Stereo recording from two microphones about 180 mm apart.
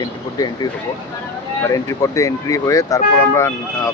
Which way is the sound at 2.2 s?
15° left (ahead or behind).